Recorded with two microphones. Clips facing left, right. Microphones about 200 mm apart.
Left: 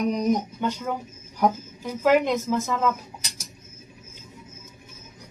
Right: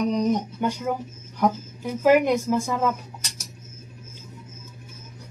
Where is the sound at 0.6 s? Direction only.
10° right (ahead or behind).